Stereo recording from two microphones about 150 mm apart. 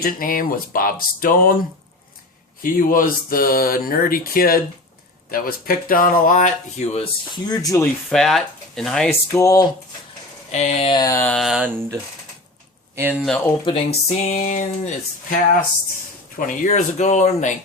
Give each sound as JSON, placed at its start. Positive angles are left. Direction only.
{"t": 0.0, "sound": "speech", "side_deg": 70}
{"t": 2.6, "sound": "speech", "side_deg": 70}
{"t": 7.4, "sound": "speech", "side_deg": 25}
{"t": 8.1, "sound": "speech", "side_deg": 0}
{"t": 9.0, "sound": "speech", "side_deg": 20}
{"t": 10.5, "sound": "speech", "side_deg": 50}
{"t": 10.9, "sound": "speech", "side_deg": 25}
{"t": 11.2, "sound": "a sound", "side_deg": 10}
{"t": 11.4, "sound": "speech", "side_deg": -5}
{"t": 13.0, "sound": "speech", "side_deg": -10}
{"t": 13.7, "sound": "speech", "side_deg": 35}
{"t": 14.1, "sound": "a sound", "side_deg": 50}
{"t": 16.5, "sound": "speech", "side_deg": 55}